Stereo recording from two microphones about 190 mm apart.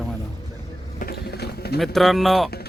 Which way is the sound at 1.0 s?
55° left (ahead or behind).